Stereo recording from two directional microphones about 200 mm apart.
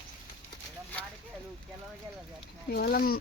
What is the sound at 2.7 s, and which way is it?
Speech, 50° left (ahead or behind).